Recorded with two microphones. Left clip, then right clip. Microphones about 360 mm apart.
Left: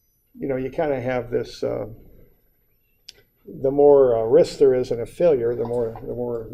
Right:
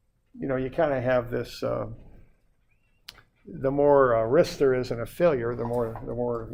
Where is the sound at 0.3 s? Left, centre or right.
Right.